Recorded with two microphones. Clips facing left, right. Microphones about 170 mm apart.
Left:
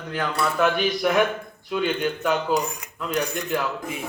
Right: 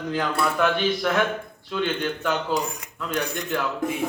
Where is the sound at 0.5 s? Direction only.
10° left (ahead or behind).